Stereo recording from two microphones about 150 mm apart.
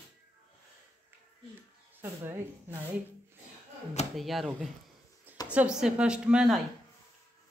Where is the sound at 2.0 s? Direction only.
15° right (ahead or behind).